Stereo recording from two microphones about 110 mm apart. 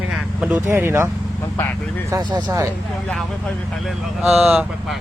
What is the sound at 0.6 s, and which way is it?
Speech, 20° right (ahead or behind).